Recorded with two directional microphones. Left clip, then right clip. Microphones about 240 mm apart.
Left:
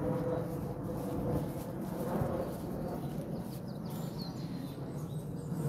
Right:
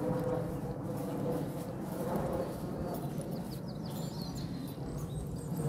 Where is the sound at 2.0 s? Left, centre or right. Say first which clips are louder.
Right 1 dB; centre.